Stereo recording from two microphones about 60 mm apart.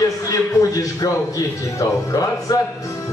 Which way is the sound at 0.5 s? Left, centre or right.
Left.